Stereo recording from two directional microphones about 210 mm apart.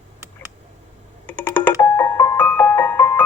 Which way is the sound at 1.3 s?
10° left (ahead or behind).